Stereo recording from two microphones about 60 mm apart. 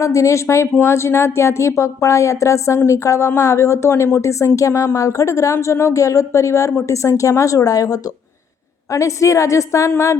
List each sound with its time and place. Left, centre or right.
0.0 s speech: left
8.9 s speech: left